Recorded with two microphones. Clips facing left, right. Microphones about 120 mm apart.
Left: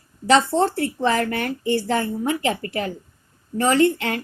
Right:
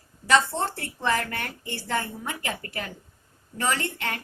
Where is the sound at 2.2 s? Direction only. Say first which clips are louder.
Left 10 dB; 75° left (ahead or behind).